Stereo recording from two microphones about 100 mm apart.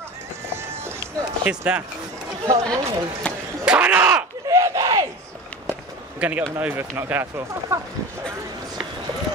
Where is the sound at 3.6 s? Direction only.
10° right (ahead or behind).